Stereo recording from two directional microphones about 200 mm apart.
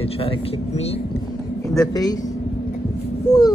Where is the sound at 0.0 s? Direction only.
30° left (ahead or behind).